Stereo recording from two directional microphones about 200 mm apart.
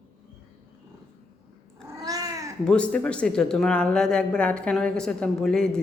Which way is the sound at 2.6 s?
5° left (ahead or behind).